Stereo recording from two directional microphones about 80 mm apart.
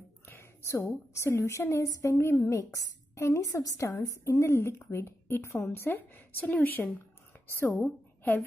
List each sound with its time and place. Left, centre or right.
0.3 s a woman's voice: left
4.2 s a woman's voice: left